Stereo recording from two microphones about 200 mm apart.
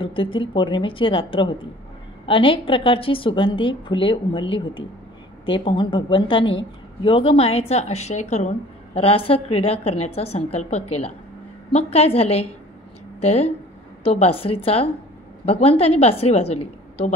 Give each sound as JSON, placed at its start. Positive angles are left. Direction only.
{"t": 0.0, "sound": "a woman's voice", "side_deg": 25}